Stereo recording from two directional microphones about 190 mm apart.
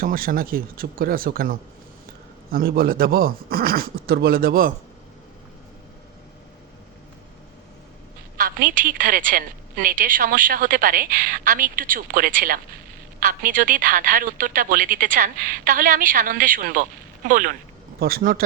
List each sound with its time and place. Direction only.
0.0 s a woman's voice: 50° right (ahead or behind)
8.4 s a woman's voice: 50° right (ahead or behind)